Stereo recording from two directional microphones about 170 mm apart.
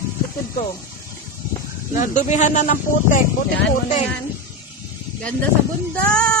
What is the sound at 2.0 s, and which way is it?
Speech, 45° left (ahead or behind).